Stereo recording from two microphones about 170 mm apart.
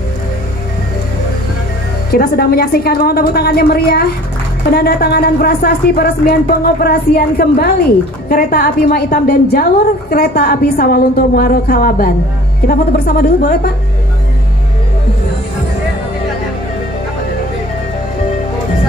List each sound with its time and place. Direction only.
2.1 s a woman's voice: 65° left (ahead or behind)